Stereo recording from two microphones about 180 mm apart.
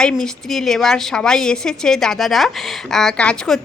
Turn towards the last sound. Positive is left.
turn(degrees=5)  # may be behind; listen again after turning